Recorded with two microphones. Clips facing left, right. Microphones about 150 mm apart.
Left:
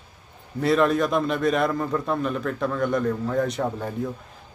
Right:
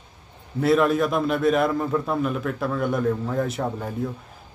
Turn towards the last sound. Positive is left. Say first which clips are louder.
# left 1 dB
turn(degrees=0)  # may be behind; listen again after turning